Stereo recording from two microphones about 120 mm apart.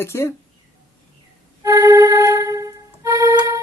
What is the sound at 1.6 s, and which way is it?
Music, 25° right (ahead or behind).